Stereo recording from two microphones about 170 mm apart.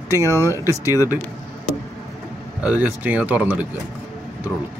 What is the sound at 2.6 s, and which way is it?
A man's voice, 10° right (ahead or behind).